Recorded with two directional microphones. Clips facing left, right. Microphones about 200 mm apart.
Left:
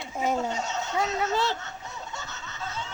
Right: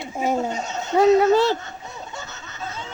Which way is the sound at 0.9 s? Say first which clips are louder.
Right 15 dB; 60° right (ahead or behind).